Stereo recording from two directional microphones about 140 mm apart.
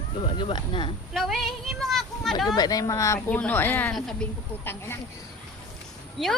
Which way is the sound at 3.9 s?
Centre (ahead or behind).